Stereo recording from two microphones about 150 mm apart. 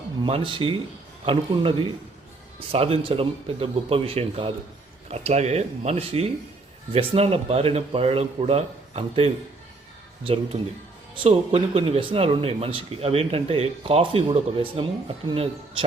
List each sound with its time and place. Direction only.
0.2 s speech: 35° right (ahead or behind)
2.7 s speech: 40° right (ahead or behind)